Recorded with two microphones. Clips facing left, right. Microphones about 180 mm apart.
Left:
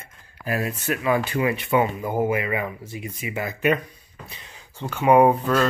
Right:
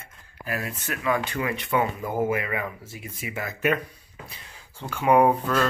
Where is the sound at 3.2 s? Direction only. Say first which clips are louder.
Left 3 dB; 10° left (ahead or behind).